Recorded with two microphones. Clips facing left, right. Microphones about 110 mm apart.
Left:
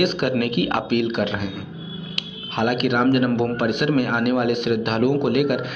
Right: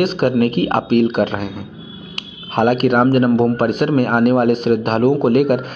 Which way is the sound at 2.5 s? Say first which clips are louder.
Right 6 dB; 40° right (ahead or behind).